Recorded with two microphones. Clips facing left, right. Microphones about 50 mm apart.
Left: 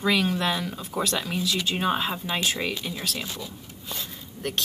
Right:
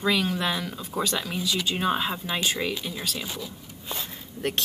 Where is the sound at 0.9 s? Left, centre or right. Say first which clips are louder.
Left 1 dB; centre.